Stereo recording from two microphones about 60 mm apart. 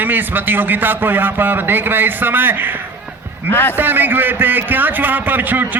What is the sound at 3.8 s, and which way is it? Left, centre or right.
A man's voice, right.